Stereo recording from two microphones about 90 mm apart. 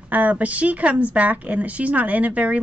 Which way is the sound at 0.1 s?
15° right (ahead or behind).